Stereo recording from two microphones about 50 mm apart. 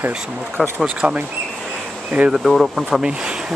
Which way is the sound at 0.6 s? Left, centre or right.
Centre.